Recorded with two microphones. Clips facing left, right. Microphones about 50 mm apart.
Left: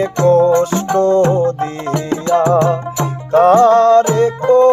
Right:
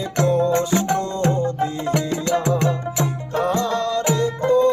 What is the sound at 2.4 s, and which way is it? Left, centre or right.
Music, left.